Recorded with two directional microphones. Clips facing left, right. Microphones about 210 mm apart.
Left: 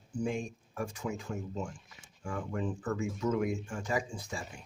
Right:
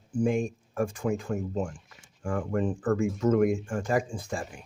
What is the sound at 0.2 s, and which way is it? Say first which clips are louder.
Speech: right 8 dB; 50° right (ahead or behind).